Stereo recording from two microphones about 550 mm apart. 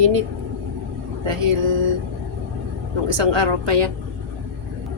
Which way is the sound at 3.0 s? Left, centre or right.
Right.